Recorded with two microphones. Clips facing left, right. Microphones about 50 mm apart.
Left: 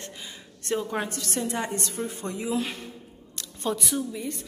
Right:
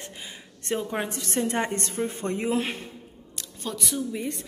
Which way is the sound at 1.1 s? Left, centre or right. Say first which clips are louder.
Right 3 dB; right.